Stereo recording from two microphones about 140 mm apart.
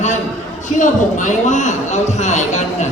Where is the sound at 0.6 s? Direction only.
60° left (ahead or behind).